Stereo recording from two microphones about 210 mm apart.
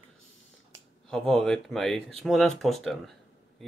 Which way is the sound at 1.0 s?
Centre (ahead or behind).